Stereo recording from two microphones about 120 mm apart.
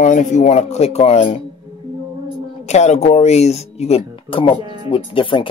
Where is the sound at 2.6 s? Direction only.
70° left (ahead or behind); by 4.6 s 45° left (ahead or behind).